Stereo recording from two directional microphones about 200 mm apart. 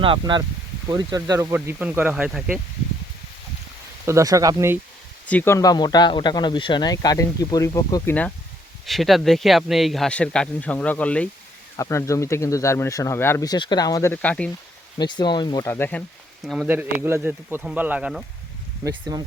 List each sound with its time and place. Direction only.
0.0 s speech: 25° right (ahead or behind); by 2.6 s 5° right (ahead or behind)
4.0 s speech: 15° right (ahead or behind)
5.2 s speech: 5° left (ahead or behind)
8.9 s speech: centre (ahead or behind)
14.9 s speech: 20° left (ahead or behind)
16.5 s speech: 5° right (ahead or behind)
19.1 s speech: 20° right (ahead or behind)